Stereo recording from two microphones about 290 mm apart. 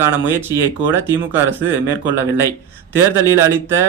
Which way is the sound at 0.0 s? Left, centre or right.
Centre.